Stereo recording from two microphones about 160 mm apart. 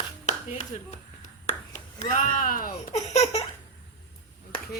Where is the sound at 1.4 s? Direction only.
50° left (ahead or behind).